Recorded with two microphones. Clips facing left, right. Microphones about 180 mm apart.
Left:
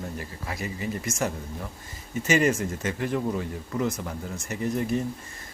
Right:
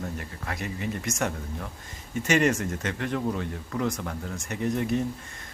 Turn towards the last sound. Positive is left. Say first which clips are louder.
# even
turn(degrees=0)  # may be behind; listen again after turning